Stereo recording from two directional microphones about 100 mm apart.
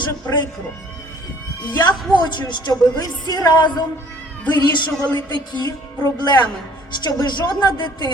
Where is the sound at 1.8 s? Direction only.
45° left (ahead or behind).